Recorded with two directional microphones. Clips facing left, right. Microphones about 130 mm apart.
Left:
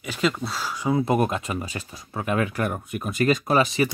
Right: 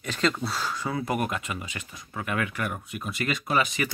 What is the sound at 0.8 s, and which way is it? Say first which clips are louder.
Speech: left 8 dB; 25° left (ahead or behind).